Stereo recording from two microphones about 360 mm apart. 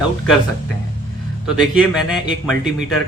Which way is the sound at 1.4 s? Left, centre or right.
Centre.